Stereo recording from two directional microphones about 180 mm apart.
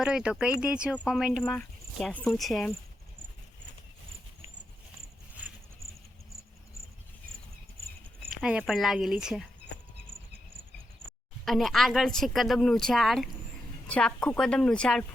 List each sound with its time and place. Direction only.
0.0 s speech: 5° right (ahead or behind)
5.4 s a sound: 10° right (ahead or behind)
8.4 s speech: 5° right (ahead or behind)
11.4 s speech: centre (ahead or behind)